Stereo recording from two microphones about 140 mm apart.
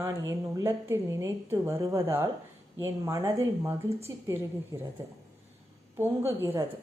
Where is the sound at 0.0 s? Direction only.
25° right (ahead or behind).